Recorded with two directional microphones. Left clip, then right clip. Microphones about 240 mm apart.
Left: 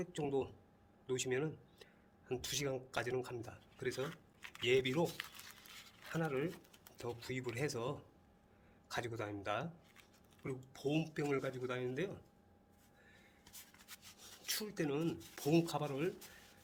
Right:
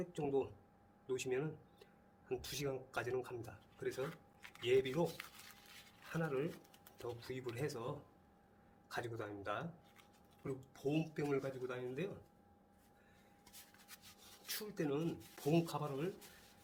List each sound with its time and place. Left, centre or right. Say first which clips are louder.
0.0 s speech: even; left
4.0 s a sound: left 1 dB; left
4.6 s speech: left 1 dB; left
6.1 s speech: left 1 dB; left
14.4 s speech: left 2 dB; left